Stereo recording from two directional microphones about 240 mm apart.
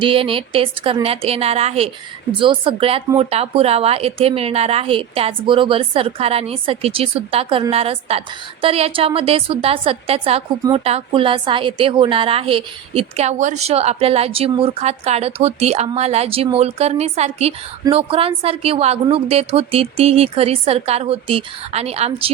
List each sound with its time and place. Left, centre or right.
0.0 s a woman's voice: right